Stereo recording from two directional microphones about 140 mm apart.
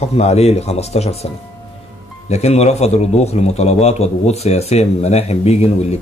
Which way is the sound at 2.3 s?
50° left (ahead or behind).